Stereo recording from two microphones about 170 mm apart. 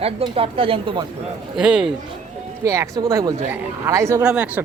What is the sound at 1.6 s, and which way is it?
Speech, 5° right (ahead or behind).